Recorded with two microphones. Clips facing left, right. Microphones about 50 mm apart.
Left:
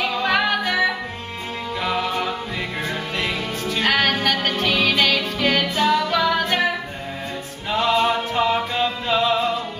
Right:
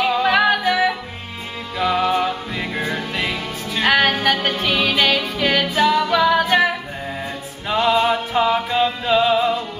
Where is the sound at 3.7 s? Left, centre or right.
Centre.